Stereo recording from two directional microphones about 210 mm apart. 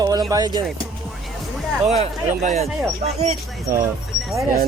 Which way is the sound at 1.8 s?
30° right (ahead or behind).